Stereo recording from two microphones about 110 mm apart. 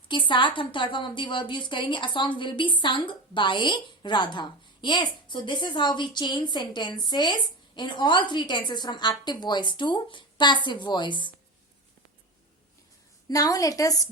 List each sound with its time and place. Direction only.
0.1 s a woman's voice: 45° left (ahead or behind)
13.2 s a woman's voice: 30° left (ahead or behind)